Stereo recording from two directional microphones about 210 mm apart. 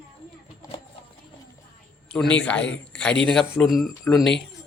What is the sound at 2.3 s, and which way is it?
Speech, 5° left (ahead or behind).